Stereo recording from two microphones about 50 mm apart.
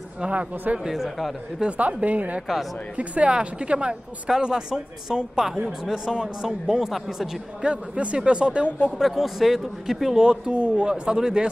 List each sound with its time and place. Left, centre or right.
0.2 s a man's voice: right
0.8 s speech: centre
1.6 s a man's voice: right; by 7.2 s centre
7.6 s a man's voice: right
8.9 s speech: centre
10.2 s speech: centre